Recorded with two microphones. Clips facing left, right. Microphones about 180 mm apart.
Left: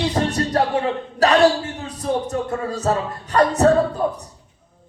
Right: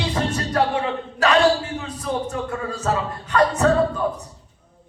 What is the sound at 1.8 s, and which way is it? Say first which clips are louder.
Speech: left 3 dB; 35° left (ahead or behind).